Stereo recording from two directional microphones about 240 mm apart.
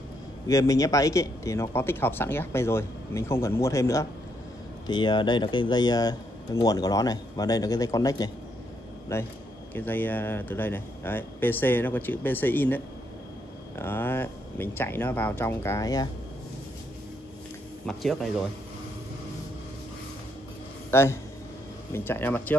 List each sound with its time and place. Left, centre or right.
0.5 s speech: centre
17.8 s speech: centre
20.9 s speech: centre